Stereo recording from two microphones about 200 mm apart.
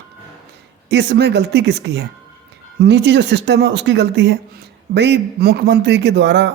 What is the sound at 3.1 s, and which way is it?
Speech, 60° right (ahead or behind).